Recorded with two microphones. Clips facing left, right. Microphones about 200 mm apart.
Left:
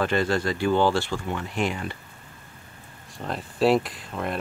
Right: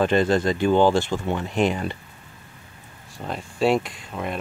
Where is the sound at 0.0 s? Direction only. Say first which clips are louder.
Right 4 dB; 20° right (ahead or behind).